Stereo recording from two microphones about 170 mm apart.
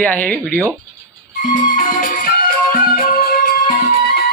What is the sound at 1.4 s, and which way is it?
Music, 50° left (ahead or behind).